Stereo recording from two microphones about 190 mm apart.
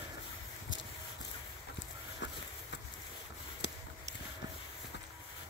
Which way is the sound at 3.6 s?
65° left (ahead or behind).